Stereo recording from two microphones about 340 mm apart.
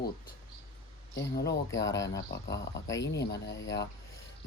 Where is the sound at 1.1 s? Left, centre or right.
Left.